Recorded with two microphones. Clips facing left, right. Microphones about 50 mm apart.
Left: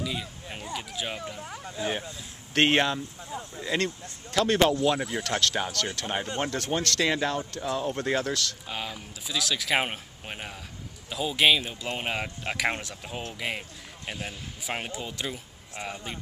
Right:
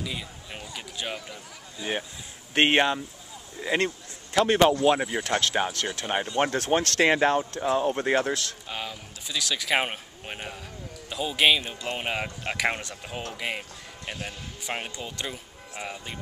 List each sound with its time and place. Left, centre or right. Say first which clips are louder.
0.0 s speech: left 2 dB; centre
2.5 s speech: right 1 dB; centre
6.3 s speech: right 7 dB; right
8.6 s speech: even; centre